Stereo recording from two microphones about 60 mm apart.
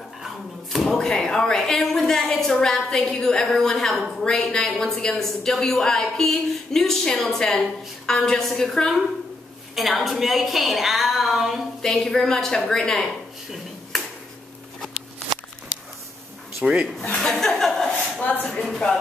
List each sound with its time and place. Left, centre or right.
0.7 s a woman's voice: centre
11.8 s a woman's voice: centre
16.6 s a woman's voice: centre
17.1 s a woman's voice: centre
18.2 s speech: left
18.5 s a woman's voice: centre